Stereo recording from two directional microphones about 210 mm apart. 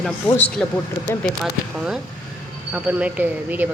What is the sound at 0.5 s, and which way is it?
Speech, 5° left (ahead or behind).